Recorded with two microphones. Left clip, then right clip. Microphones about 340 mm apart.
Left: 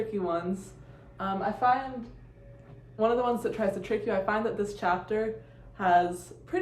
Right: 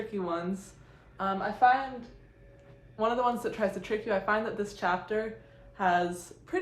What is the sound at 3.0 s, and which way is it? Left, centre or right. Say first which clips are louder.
A woman's voice: left 2 dB; centre.